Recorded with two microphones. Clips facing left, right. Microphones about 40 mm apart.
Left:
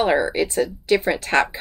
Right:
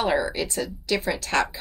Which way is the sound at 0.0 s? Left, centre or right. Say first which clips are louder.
Left 5 dB; left.